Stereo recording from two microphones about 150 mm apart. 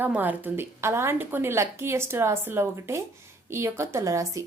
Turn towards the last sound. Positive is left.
turn(degrees=-20)  # may be behind; listen again after turning